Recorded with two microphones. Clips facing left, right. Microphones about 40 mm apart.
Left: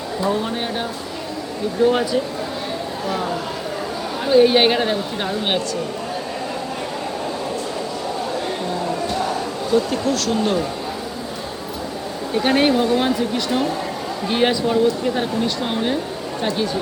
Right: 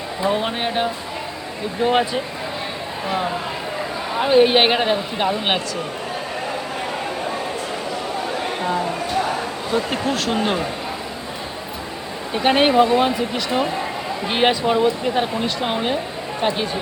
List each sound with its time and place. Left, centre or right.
0.3 s speech: right
4.2 s speech: right
9.7 s speech: right
12.3 s speech: right